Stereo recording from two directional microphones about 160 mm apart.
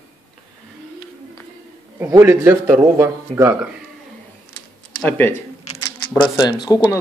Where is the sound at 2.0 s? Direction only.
15° right (ahead or behind).